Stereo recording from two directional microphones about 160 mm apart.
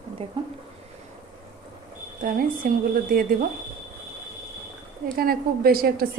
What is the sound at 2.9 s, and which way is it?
Speech, 65° right (ahead or behind).